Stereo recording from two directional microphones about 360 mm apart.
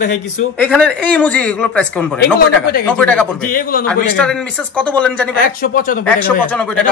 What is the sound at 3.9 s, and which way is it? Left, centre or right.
Speech, centre.